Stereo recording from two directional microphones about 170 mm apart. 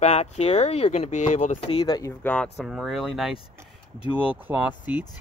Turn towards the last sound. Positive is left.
turn(degrees=-10)  # may be behind; listen again after turning